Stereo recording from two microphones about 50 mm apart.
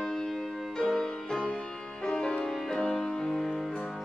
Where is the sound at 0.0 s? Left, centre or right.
Centre.